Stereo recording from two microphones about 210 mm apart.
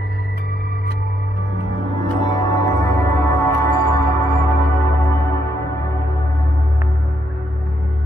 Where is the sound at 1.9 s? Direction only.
20° left (ahead or behind).